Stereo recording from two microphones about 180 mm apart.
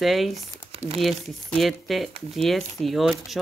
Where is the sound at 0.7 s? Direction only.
35° right (ahead or behind).